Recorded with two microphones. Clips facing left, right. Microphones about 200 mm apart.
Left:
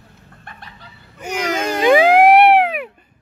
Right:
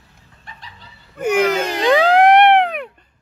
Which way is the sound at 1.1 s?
55° right (ahead or behind).